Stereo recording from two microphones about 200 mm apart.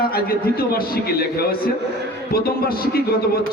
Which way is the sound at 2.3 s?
50° left (ahead or behind).